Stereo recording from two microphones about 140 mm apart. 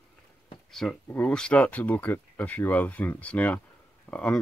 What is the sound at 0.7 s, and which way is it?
Speech, 5° left (ahead or behind).